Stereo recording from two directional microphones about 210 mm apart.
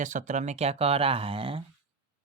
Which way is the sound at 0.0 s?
35° right (ahead or behind).